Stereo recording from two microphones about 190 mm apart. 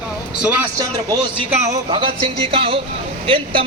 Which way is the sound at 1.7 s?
25° right (ahead or behind).